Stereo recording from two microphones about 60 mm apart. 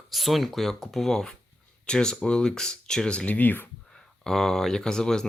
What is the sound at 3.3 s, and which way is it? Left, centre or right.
Speech, left.